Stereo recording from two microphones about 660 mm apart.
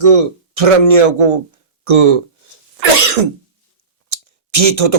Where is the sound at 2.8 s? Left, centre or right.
Right.